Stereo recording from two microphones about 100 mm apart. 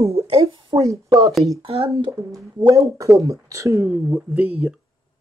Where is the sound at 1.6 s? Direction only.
75° right (ahead or behind).